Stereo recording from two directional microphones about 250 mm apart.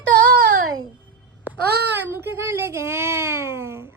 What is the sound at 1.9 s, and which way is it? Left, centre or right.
Speech, centre.